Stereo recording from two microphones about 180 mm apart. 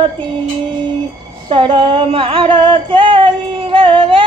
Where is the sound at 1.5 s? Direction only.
25° right (ahead or behind).